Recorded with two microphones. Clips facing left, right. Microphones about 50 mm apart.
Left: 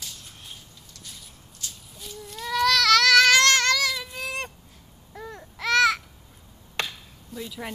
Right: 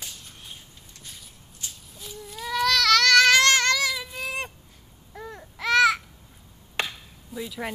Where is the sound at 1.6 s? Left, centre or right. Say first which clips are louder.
Even; right.